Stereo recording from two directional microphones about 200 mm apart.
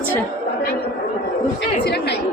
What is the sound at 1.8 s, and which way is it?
Speech, 55° left (ahead or behind).